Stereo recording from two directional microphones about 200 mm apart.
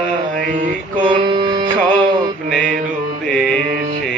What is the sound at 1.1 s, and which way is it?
Music, 25° right (ahead or behind).